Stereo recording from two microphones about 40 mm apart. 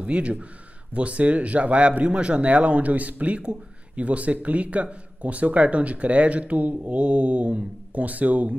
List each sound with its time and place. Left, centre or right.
0.0 s a man's voice: right